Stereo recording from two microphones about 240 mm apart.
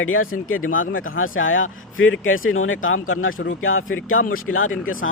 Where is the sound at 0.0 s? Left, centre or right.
Left.